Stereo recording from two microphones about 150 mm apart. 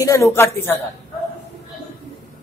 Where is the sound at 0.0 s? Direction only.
20° left (ahead or behind).